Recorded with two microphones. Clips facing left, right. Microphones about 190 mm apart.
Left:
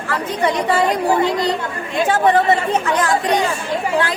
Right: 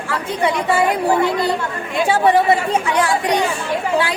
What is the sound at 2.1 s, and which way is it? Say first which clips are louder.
Speech: right 1 dB; 10° right (ahead or behind).